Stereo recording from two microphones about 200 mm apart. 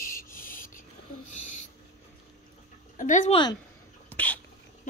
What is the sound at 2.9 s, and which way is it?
Speech, 40° left (ahead or behind).